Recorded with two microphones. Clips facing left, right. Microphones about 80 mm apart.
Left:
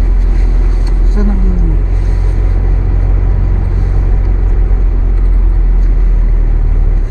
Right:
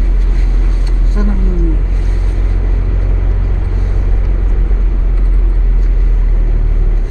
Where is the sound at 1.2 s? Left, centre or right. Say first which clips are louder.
Left 2 dB; centre.